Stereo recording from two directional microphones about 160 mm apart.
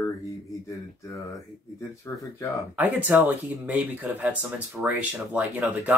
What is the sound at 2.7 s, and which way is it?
Speech, 10° right (ahead or behind).